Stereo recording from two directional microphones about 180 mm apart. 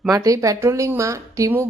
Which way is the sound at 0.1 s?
20° right (ahead or behind).